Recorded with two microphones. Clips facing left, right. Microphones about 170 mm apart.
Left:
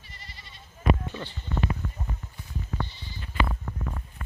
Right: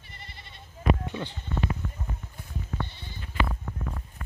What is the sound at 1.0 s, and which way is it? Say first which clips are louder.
Speech: right 2 dB; 15° right (ahead or behind).